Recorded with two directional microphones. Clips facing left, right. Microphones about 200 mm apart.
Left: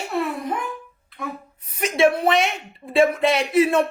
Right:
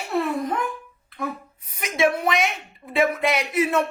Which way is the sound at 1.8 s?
30° left (ahead or behind).